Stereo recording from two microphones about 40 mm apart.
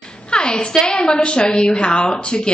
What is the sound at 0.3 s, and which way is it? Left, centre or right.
A woman's voice, left.